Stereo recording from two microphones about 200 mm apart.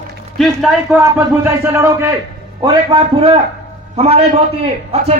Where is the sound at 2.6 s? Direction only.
25° right (ahead or behind).